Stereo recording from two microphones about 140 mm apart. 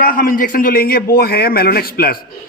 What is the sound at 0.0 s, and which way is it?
A man's voice, 85° left.